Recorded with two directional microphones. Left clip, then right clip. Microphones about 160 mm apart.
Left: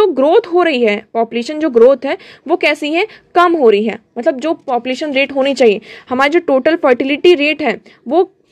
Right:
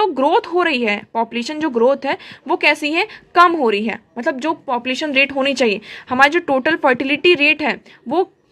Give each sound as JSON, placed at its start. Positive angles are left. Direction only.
{"t": 0.0, "sound": "a woman's voice", "side_deg": 25}